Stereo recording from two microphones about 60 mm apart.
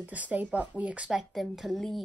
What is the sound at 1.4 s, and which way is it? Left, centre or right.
Speech, centre.